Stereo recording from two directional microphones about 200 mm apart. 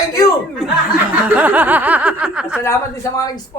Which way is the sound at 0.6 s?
Centre (ahead or behind).